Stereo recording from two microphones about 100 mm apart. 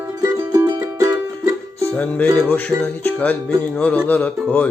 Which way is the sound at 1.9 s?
15° left (ahead or behind).